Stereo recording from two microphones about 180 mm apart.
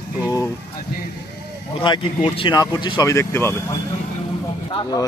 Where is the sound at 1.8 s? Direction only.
30° left (ahead or behind); by 3.5 s 15° left (ahead or behind).